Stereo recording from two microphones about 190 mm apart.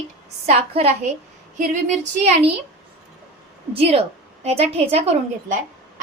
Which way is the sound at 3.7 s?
30° right (ahead or behind).